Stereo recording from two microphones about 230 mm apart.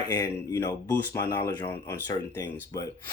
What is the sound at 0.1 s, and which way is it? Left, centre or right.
Speech, centre.